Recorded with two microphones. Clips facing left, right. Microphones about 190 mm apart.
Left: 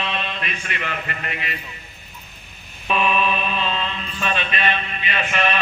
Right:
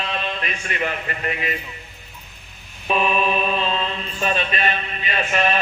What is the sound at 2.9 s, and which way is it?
Mantra, 40° right (ahead or behind).